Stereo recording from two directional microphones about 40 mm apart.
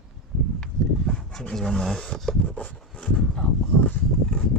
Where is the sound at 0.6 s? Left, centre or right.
Left.